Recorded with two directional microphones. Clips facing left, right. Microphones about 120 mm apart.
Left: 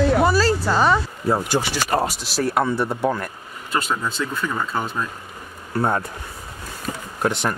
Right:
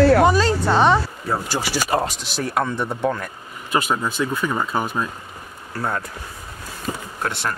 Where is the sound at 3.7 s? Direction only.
15° right (ahead or behind).